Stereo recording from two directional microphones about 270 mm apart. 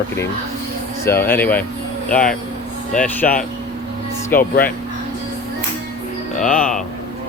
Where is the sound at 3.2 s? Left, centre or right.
Left.